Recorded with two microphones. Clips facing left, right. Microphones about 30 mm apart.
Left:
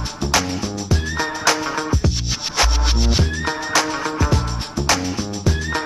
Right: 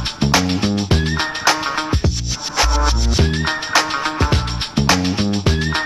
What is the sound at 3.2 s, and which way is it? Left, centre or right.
Music, right.